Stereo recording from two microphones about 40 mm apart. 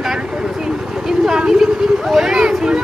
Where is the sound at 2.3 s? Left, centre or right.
Centre.